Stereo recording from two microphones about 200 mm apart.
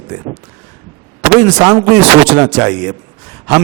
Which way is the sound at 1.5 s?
25° right (ahead or behind).